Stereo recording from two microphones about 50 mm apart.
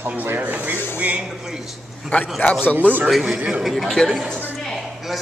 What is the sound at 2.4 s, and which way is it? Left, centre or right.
Speech, left.